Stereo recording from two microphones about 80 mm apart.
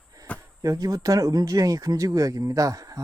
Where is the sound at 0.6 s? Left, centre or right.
Right.